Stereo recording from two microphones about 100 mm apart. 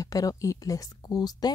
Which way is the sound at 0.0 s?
35° left (ahead or behind).